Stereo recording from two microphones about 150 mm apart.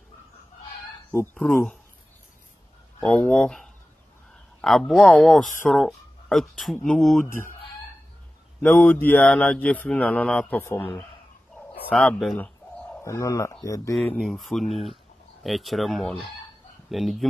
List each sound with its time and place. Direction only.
1.1 s speech: 10° left (ahead or behind)
3.0 s speech: 5° left (ahead or behind)
8.6 s speech: 10° left (ahead or behind)
11.9 s speech: 5° left (ahead or behind)
13.0 s speech: 20° left (ahead or behind)
13.9 s speech: 5° left (ahead or behind)